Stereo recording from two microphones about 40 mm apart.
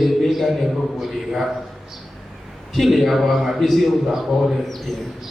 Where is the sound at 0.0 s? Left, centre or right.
Centre.